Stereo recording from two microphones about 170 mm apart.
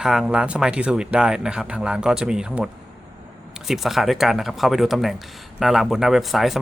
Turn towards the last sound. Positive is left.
turn(degrees=0)  # may be behind; listen again after turning